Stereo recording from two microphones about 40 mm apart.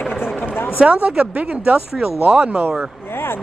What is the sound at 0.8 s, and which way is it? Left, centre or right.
Speech, right.